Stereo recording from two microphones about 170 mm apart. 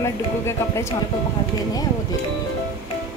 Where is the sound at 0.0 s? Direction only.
15° left (ahead or behind).